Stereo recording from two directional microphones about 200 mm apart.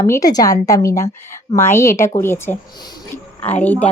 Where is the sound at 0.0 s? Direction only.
15° left (ahead or behind).